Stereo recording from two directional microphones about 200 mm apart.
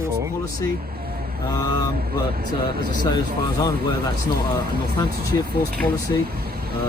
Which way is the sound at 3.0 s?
20° left (ahead or behind).